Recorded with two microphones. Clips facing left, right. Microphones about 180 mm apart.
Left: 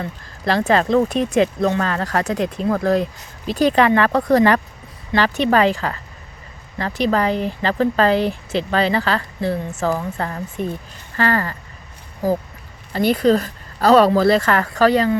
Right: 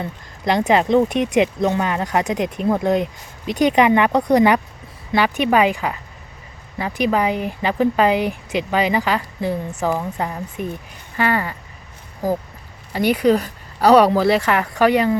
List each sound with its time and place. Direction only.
0.0 s speech: 20° right (ahead or behind)
12.9 s speech: 10° right (ahead or behind)